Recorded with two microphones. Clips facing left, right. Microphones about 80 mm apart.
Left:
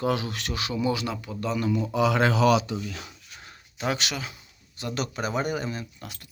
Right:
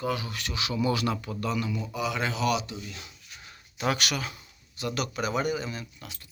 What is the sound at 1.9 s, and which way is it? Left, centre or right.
Speech, left.